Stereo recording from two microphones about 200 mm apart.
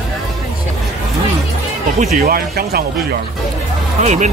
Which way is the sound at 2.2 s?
45° right (ahead or behind).